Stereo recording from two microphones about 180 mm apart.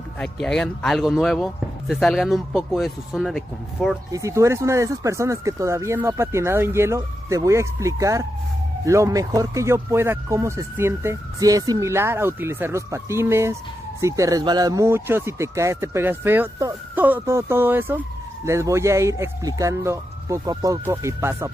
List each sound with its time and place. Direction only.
0.2 s speech: 5° left (ahead or behind)
4.1 s speech: 15° right (ahead or behind)